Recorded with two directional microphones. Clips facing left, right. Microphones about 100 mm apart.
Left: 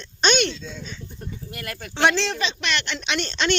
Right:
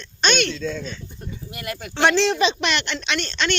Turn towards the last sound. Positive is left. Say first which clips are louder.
# left 1 dB
turn(degrees=20)  # may be behind; listen again after turning